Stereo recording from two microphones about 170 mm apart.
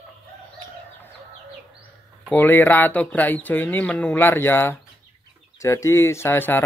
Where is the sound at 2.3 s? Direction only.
10° left (ahead or behind).